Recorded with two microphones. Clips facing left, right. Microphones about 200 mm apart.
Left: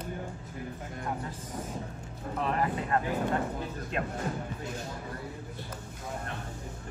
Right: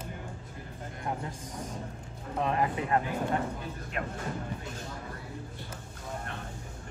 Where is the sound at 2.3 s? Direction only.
20° right (ahead or behind).